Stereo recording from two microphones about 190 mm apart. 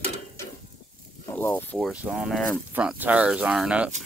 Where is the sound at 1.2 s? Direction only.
10° left (ahead or behind).